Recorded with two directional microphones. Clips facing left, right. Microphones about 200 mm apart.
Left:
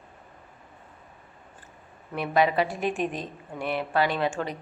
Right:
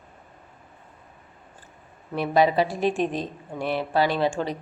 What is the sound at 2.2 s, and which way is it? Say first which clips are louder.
Speech: right 3 dB; 35° right (ahead or behind).